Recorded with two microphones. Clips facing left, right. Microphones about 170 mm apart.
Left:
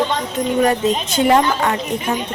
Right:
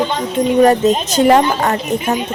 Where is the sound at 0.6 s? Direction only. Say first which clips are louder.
Right 6 dB; 40° right (ahead or behind).